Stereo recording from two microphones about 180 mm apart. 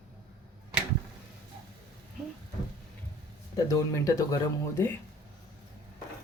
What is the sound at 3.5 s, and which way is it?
Speech, 20° left (ahead or behind).